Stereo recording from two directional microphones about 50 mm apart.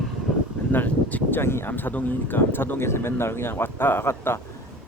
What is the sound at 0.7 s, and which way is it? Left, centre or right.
Speech, left.